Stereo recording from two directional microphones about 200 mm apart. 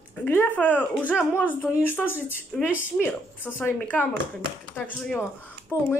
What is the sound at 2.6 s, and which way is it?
Speech, 10° right (ahead or behind).